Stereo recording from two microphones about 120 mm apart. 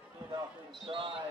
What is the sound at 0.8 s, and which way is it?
Speech, 50° right (ahead or behind).